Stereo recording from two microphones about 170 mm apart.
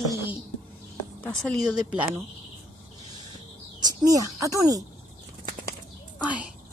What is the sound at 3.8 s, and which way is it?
Speech, 20° right (ahead or behind).